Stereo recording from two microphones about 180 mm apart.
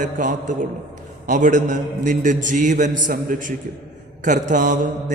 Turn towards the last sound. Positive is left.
turn(degrees=-45)  # may be behind; listen again after turning